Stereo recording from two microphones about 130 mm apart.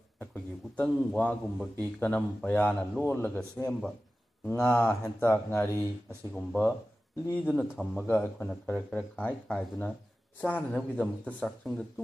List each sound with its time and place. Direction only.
0.2 s a man's voice: 15° left (ahead or behind)